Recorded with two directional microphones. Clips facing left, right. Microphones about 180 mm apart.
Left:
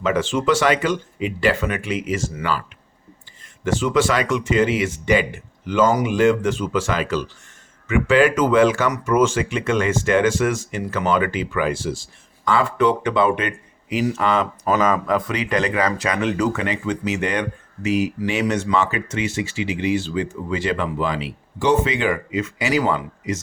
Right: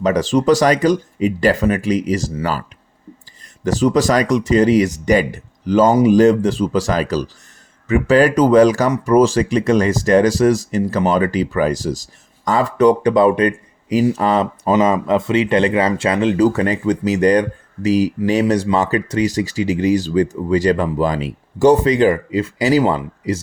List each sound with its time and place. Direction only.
0.0 s speech: 40° right (ahead or behind)